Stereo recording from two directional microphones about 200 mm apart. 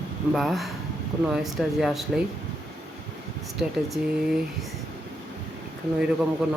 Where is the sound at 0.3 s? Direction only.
Centre (ahead or behind).